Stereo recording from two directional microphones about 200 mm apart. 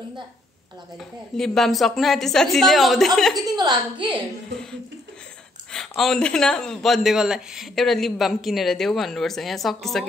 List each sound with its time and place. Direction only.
0.9 s a man's voice: centre (ahead or behind)
3.3 s a woman's voice: 20° right (ahead or behind)
5.7 s a man's voice: centre (ahead or behind)